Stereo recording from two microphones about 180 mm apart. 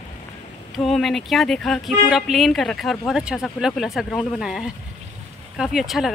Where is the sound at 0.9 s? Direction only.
Centre (ahead or behind).